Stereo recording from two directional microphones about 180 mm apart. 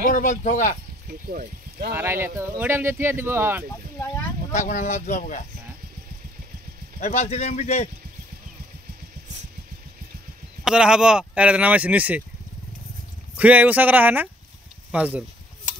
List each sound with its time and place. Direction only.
0.0 s speech: 45° left (ahead or behind)
1.0 s speech: 55° right (ahead or behind)
2.0 s speech: 15° right (ahead or behind)
4.5 s speech: 45° left (ahead or behind)
7.0 s speech: 35° left (ahead or behind)
10.6 s speech: 5° right (ahead or behind)
13.4 s speech: 10° right (ahead or behind)